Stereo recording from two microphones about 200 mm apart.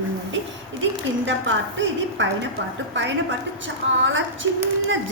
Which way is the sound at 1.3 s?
70° right (ahead or behind).